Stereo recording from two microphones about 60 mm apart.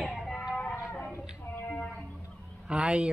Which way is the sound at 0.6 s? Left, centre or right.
Centre.